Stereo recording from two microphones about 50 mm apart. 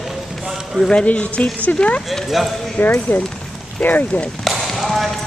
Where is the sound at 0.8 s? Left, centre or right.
Left.